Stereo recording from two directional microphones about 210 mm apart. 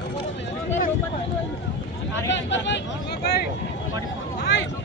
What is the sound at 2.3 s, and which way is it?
Vehicle, 60° left (ahead or behind).